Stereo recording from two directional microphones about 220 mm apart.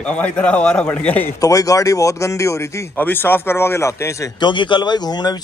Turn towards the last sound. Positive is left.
turn(degrees=20)  # may be behind; listen again after turning